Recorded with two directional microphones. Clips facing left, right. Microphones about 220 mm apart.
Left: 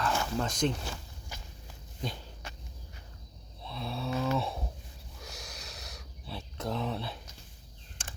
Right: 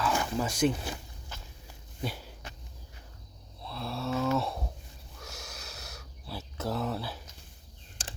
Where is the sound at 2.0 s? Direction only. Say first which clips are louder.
Right 2 dB; 5° right (ahead or behind).